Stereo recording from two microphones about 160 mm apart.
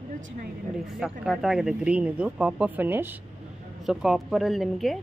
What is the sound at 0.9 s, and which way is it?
Speech, 5° right (ahead or behind).